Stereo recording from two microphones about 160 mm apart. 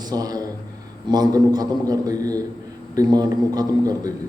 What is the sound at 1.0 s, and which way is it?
A man's voice, 25° right (ahead or behind).